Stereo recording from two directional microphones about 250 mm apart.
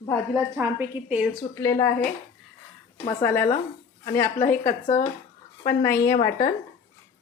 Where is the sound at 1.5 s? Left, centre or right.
Centre.